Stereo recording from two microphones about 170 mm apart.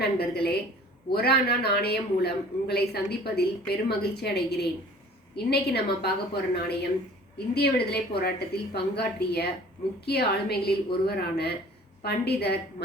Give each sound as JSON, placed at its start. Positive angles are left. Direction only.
{"t": 0.0, "sound": "a man's voice", "side_deg": 70}